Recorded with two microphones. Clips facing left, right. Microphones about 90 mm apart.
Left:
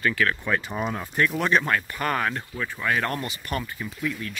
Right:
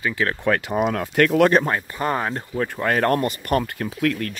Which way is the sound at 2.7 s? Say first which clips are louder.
Right 6 dB; 45° right (ahead or behind).